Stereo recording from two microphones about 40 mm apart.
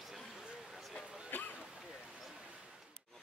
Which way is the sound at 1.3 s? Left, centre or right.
Left.